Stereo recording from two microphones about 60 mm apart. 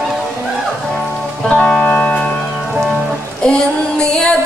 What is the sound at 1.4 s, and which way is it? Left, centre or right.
Music, centre.